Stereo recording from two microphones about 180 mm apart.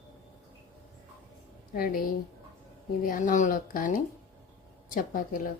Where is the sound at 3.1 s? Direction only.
45° left (ahead or behind).